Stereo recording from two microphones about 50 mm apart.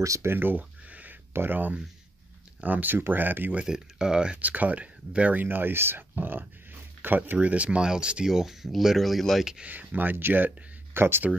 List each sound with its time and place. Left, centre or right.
0.0 s speech: right
0.3 s a sound: right
1.3 s speech: right
3.6 s speech: centre
4.4 s speech: right
5.4 s speech: right
6.1 s a sound: right
7.3 s speech: right
8.3 s speech: centre
9.7 s speech: right